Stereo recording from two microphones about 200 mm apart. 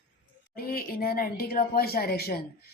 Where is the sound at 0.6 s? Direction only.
50° left (ahead or behind).